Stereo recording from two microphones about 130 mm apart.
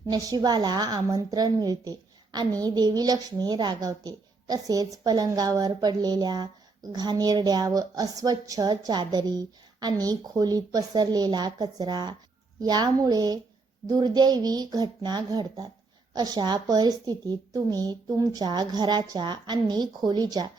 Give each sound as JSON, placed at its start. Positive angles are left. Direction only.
{"t": 0.0, "sound": "a woman's voice", "side_deg": -30}